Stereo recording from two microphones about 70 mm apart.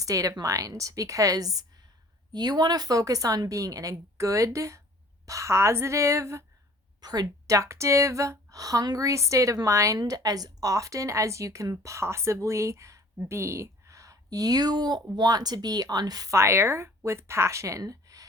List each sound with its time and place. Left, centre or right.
0.0 s speech: right
2.3 s speech: right
7.0 s a woman's voice: right
7.5 s speech: right
10.0 s speech: right
16.3 s speech: right